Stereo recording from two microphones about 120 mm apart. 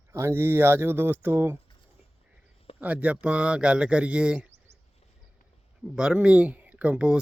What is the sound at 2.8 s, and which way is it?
Speech, 10° right (ahead or behind).